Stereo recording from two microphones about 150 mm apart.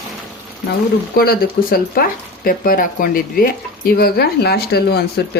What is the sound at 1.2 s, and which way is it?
Speech, 85° left.